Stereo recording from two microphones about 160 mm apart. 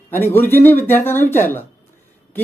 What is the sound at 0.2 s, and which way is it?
Speech, 15° left (ahead or behind).